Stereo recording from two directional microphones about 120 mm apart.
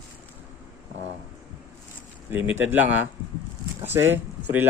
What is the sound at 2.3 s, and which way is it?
Speech, 15° right (ahead or behind).